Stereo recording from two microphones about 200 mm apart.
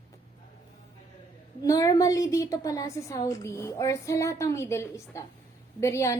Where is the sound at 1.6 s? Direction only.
15° left (ahead or behind).